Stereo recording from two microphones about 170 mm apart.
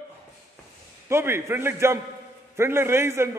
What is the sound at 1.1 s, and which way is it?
A man's voice, 15° right (ahead or behind).